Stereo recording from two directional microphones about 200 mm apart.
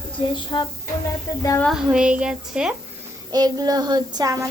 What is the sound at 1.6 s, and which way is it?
Speech, centre (ahead or behind).